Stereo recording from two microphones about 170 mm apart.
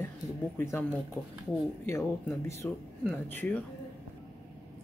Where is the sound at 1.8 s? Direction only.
15° left (ahead or behind).